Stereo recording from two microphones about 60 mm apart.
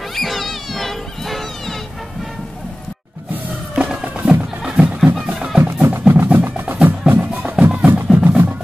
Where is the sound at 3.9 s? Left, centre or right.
Centre.